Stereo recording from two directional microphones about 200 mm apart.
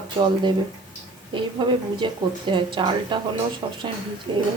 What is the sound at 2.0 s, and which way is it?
Speech, 25° right (ahead or behind).